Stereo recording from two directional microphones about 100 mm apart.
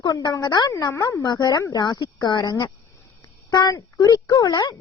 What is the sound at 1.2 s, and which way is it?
Speech, 45° left (ahead or behind).